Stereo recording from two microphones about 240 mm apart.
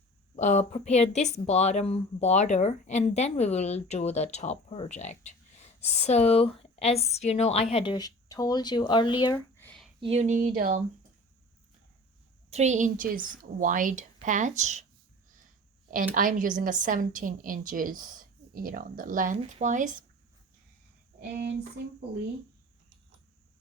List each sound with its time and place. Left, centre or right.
0.3 s speech: left
9.6 s a sound: centre
10.0 s a woman's voice: right
12.5 s a woman's voice: right
16.1 s a woman's voice: right
21.2 s a sound: right